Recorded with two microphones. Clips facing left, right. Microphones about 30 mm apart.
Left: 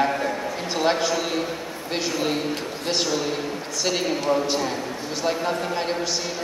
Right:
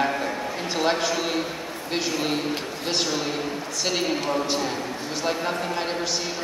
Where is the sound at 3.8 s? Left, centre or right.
Centre.